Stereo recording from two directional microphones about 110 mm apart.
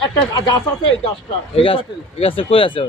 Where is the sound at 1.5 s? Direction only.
55° left (ahead or behind).